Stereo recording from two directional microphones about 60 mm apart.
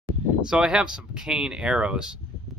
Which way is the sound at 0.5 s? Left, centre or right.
Centre.